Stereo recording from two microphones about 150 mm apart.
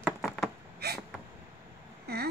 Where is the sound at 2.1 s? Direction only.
90° right.